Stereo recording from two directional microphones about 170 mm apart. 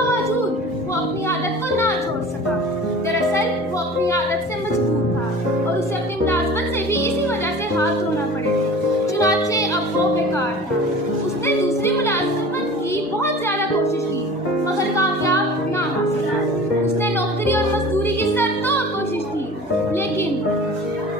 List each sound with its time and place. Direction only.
9.2 s music: 20° left (ahead or behind)
11.4 s music: 15° left (ahead or behind)
18.0 s music: 15° left (ahead or behind)